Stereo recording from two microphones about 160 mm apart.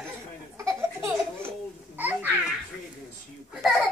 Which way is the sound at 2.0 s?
10° right (ahead or behind).